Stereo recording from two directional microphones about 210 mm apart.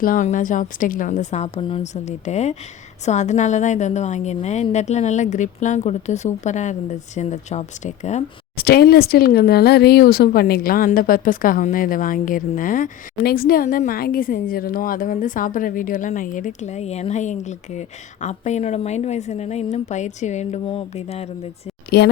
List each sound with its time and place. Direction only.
0.0 s speech: 40° left (ahead or behind)
8.5 s speech: 50° left (ahead or behind); by 21.2 s 30° left (ahead or behind)
21.8 s speech: 50° left (ahead or behind)